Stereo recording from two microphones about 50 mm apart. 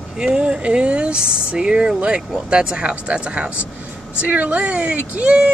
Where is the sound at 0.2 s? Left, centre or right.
Centre.